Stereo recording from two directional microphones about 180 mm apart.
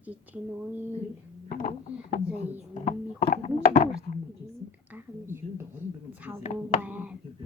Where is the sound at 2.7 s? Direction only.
45° left (ahead or behind).